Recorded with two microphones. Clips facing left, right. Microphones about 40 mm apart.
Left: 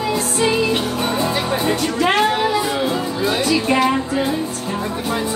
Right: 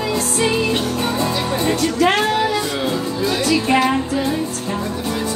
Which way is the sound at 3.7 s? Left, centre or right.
Centre.